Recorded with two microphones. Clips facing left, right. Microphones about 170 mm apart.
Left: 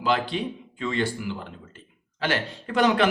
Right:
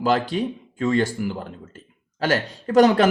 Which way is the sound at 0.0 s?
45° right (ahead or behind).